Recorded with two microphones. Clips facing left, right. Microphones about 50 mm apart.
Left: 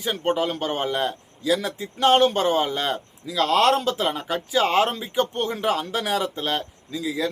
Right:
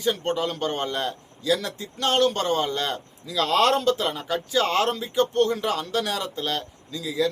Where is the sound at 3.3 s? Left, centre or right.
Centre.